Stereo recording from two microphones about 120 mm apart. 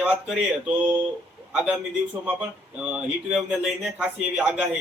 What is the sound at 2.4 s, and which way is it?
Speech, 10° right (ahead or behind).